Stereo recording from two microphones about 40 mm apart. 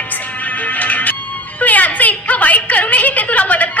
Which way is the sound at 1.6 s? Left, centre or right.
Left.